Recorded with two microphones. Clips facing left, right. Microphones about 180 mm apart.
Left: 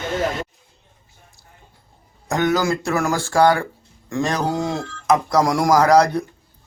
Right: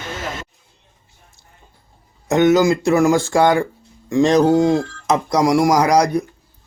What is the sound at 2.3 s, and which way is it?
Speech, 20° right (ahead or behind).